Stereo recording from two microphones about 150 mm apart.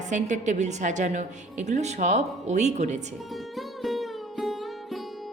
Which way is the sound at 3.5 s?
Centre (ahead or behind).